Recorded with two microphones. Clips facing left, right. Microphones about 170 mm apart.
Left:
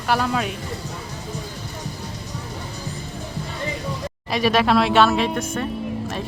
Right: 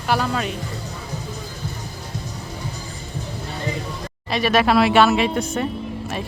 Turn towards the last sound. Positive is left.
turn(degrees=-10)  # may be behind; listen again after turning